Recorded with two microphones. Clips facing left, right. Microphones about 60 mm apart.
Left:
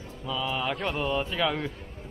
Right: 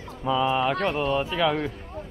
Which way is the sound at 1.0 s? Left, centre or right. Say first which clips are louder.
Right 4 dB; centre.